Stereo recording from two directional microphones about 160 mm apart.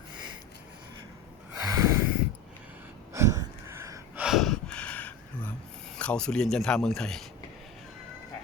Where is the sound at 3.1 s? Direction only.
15° right (ahead or behind).